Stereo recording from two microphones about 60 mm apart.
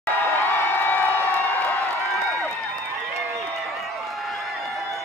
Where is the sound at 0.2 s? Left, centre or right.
Left.